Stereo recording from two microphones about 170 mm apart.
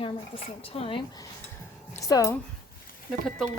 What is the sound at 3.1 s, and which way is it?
Speech, centre (ahead or behind).